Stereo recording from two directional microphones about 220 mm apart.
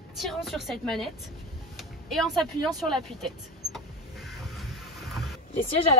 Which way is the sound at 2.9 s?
Centre (ahead or behind).